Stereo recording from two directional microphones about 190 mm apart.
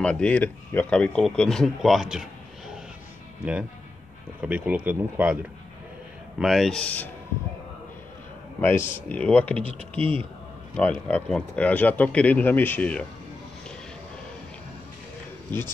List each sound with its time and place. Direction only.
0.0 s speech: 5° left (ahead or behind)
4.4 s speech: 5° right (ahead or behind)
6.4 s speech: centre (ahead or behind)
8.5 s speech: 10° left (ahead or behind)
9.9 s speech: 30° right (ahead or behind)
10.8 s speech: 10° left (ahead or behind)